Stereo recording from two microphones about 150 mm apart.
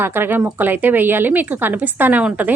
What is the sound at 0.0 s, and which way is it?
A woman's voice, 15° right (ahead or behind).